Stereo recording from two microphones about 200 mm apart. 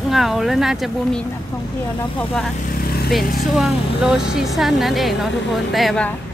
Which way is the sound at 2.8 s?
50° left (ahead or behind).